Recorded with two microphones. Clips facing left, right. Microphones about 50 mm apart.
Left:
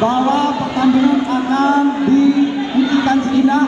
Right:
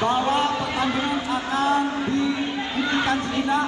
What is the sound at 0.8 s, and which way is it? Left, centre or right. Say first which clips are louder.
Speech: left 14 dB; left.